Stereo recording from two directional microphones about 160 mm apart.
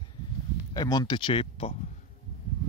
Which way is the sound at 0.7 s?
25° left (ahead or behind).